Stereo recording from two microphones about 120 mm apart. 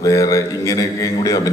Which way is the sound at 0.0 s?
30° left (ahead or behind).